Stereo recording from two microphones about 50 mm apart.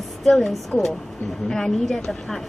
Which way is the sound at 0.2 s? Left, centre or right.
Centre.